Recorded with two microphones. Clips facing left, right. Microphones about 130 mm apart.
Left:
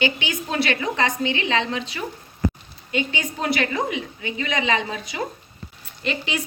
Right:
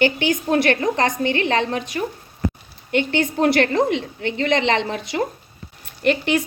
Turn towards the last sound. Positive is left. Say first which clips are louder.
# right 8 dB
turn(degrees=-60)  # may be behind; listen again after turning